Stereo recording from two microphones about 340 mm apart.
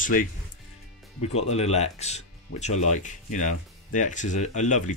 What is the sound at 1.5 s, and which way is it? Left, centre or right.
Speech, centre.